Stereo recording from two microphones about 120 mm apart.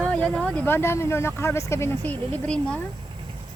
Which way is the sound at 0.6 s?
20° left (ahead or behind).